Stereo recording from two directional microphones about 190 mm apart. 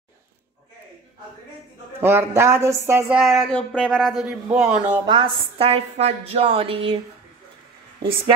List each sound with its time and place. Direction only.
2.0 s speech: 15° right (ahead or behind)
3.2 s speech: centre (ahead or behind)
5.1 s a woman's voice: 30° right (ahead or behind)